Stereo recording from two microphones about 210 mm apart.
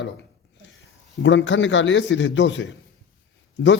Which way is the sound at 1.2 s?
60° left (ahead or behind).